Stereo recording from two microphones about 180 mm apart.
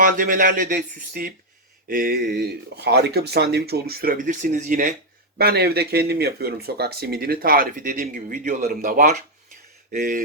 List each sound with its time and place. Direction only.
0.0 s speech: 50° right (ahead or behind)
5.4 s speech: 60° right (ahead or behind)